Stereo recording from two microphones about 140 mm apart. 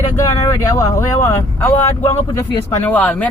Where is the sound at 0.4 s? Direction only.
25° left (ahead or behind).